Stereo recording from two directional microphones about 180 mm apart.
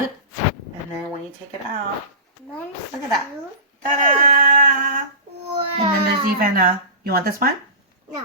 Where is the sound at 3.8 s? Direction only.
45° right (ahead or behind).